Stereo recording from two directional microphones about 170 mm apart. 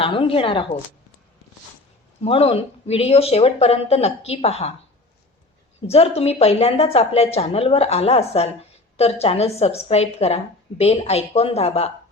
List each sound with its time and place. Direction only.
0.0 s a woman's voice: 30° left (ahead or behind)
2.2 s a woman's voice: 35° left (ahead or behind)
5.8 s a woman's voice: 35° left (ahead or behind)